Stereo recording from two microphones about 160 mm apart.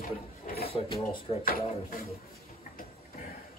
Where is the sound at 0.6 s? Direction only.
35° left (ahead or behind).